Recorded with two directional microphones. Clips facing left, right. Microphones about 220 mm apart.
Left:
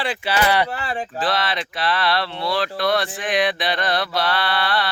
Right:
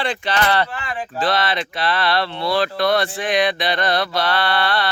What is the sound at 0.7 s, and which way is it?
Speech, 35° left (ahead or behind).